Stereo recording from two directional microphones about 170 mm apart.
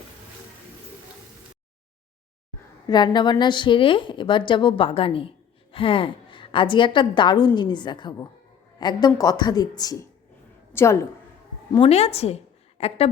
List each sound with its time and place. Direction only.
2.8 s a woman's voice: 25° left (ahead or behind)
11.7 s a woman's voice: 35° left (ahead or behind)